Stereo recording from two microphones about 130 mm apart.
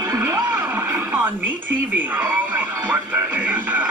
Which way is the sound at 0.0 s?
20° right (ahead or behind).